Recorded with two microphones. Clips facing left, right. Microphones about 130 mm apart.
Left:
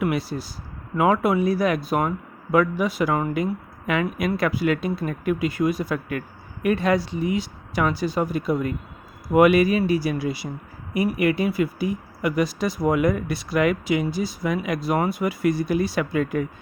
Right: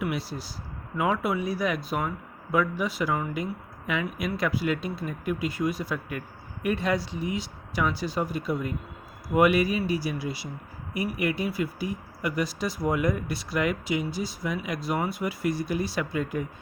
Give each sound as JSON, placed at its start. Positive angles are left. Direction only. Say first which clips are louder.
{"t": 0.0, "sound": "a sound", "louder": "left 6 dB", "side_deg": 60}
{"t": 0.9, "sound": "speech", "louder": "left 7 dB", "side_deg": 70}
{"t": 6.1, "sound": "speech", "louder": "left 6 dB", "side_deg": 70}
{"t": 8.2, "sound": "speech", "louder": "left 5 dB", "side_deg": 65}
{"t": 10.9, "sound": "speech", "louder": "left 7 dB", "side_deg": 85}